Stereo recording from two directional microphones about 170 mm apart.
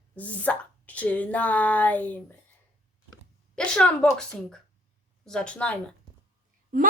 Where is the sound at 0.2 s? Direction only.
10° left (ahead or behind).